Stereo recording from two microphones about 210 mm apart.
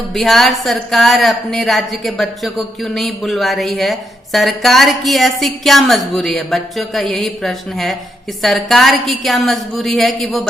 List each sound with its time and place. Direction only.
0.1 s speech: centre (ahead or behind)